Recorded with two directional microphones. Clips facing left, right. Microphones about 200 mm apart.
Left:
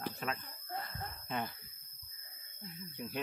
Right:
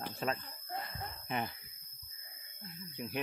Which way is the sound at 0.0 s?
30° right (ahead or behind).